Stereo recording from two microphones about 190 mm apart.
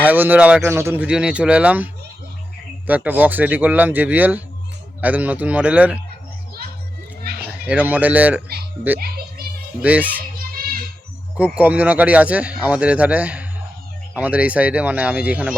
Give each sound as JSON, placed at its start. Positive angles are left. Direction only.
{"t": 0.1, "sound": "speech", "side_deg": -10}
{"t": 7.4, "sound": "speech", "side_deg": -5}
{"t": 9.8, "sound": "speech", "side_deg": -10}
{"t": 11.5, "sound": "speech", "side_deg": -10}